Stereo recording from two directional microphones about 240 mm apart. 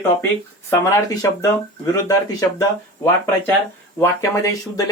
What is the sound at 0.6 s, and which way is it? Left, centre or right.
Speech, centre.